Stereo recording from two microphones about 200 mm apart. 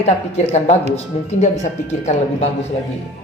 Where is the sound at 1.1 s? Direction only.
35° left (ahead or behind).